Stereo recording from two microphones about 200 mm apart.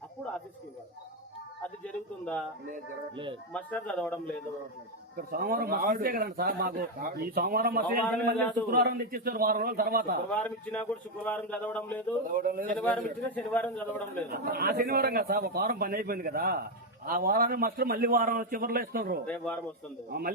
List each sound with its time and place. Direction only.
1.6 s a man's voice: 5° left (ahead or behind)
3.5 s a man's voice: 5° left (ahead or behind)
5.1 s a man's voice: 45° right (ahead or behind)
10.2 s a man's voice: 5° left (ahead or behind)
12.3 s a man's voice: 45° right (ahead or behind)
12.7 s a man's voice: 10° left (ahead or behind)
14.3 s a man's voice: 50° right (ahead or behind)
19.2 s a man's voice: 5° left (ahead or behind)
20.1 s a man's voice: 50° right (ahead or behind)